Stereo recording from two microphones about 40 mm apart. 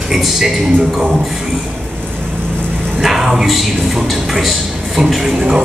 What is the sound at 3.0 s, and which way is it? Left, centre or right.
A man's voice, centre.